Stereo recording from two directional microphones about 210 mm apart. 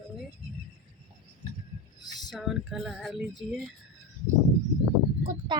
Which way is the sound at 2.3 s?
Centre (ahead or behind).